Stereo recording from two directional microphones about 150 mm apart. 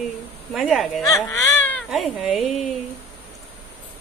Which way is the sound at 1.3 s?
20° left (ahead or behind).